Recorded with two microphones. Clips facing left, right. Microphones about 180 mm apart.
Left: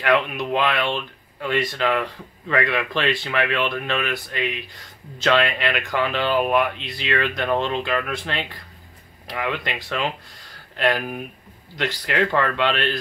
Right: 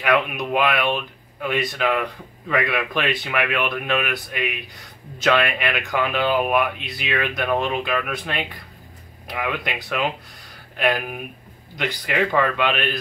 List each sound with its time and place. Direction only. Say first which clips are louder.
0.3 s speech: right 1 dB; 10° right (ahead or behind)